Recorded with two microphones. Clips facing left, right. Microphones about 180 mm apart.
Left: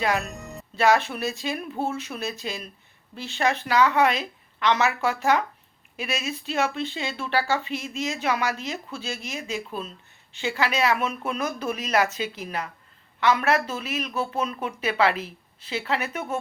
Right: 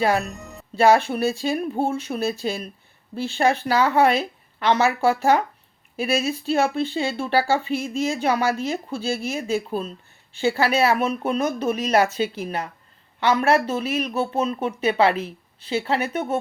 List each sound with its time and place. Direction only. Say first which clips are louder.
0.0 s speech: right 4 dB; 35° right (ahead or behind)
13.1 s speech: right 3 dB; 30° right (ahead or behind)